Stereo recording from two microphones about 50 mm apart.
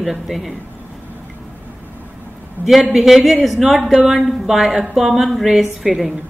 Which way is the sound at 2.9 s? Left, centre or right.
Centre.